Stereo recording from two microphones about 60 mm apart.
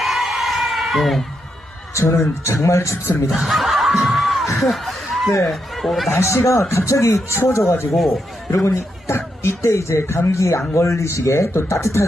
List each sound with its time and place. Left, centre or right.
0.0 s a sound: centre
2.0 s speech: left
3.2 s speech: centre
4.5 s snicker: centre
5.5 s speech: centre
6.1 s speech: left